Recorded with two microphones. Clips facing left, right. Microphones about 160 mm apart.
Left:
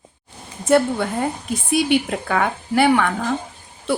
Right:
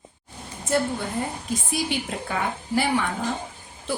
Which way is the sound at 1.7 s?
70° left (ahead or behind).